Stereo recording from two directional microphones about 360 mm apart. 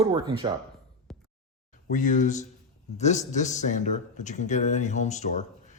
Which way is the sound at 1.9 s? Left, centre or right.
Left.